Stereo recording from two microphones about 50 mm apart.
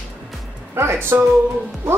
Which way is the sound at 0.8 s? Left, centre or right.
Right.